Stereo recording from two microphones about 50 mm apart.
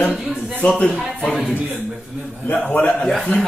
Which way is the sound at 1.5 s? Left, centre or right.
Right.